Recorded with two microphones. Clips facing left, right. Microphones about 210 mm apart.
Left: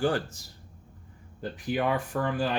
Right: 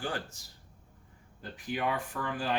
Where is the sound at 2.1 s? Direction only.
40° left (ahead or behind).